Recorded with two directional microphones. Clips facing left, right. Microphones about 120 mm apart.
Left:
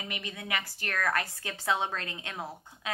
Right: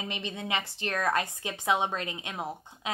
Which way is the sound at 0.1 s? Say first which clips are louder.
Right 2 dB; 25° right (ahead or behind).